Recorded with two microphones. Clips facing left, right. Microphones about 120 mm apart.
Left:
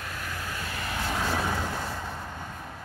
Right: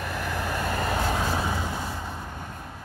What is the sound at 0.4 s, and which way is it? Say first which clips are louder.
Vehicle: right 8 dB; 60° right (ahead or behind).